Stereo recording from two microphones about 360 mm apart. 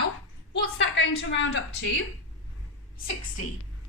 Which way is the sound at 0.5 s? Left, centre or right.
Left.